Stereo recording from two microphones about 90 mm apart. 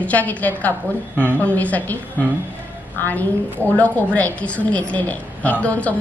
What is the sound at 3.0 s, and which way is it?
A woman's voice, 20° left (ahead or behind).